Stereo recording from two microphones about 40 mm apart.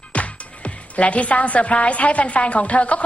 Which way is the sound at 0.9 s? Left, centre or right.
Left.